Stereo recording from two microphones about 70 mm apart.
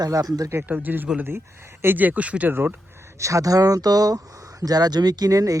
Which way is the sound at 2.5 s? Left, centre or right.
Right.